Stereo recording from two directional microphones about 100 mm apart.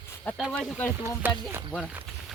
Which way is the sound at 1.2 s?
20° right (ahead or behind).